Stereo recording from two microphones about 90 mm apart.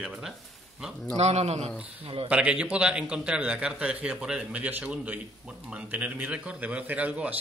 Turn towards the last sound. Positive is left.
turn(degrees=-15)  # may be behind; listen again after turning